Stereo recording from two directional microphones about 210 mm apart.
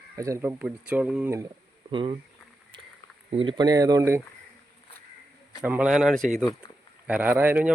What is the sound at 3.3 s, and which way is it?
Speech, 25° right (ahead or behind).